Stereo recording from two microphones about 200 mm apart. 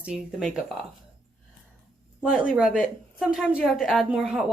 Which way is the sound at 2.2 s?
5° right (ahead or behind).